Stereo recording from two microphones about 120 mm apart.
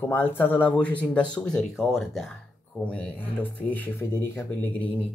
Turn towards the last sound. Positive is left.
turn(degrees=15)  # may be behind; listen again after turning